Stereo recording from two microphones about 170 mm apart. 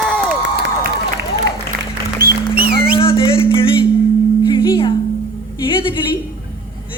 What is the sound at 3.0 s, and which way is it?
Music, 30° left (ahead or behind).